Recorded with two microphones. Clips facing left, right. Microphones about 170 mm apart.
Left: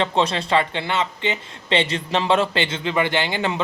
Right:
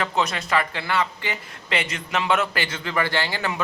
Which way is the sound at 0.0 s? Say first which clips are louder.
Left 4 dB; 30° left (ahead or behind).